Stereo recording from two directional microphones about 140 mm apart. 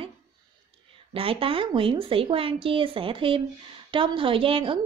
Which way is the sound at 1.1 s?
40° right (ahead or behind).